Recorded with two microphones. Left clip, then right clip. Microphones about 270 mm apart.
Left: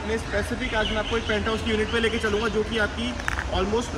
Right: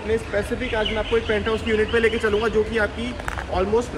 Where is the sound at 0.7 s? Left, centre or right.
Centre.